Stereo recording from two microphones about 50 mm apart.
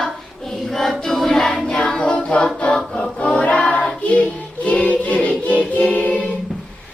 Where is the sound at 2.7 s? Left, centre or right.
Centre.